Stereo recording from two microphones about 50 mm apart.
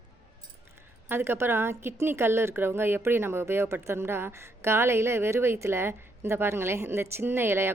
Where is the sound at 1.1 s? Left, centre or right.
Right.